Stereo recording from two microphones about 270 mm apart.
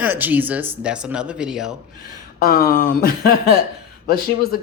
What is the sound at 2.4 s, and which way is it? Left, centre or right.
Speech, left.